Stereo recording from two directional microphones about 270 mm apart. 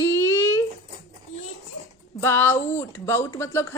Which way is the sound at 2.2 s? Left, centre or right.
Centre.